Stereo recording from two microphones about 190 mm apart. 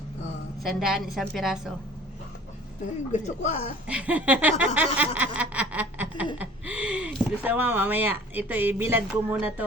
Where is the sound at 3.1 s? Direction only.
40° left (ahead or behind).